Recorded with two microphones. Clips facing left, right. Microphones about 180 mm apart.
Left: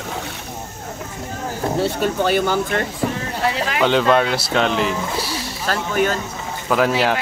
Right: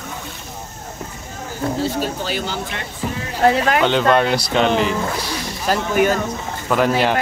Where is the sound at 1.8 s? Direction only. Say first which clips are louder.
Left 6 dB; 60° left (ahead or behind).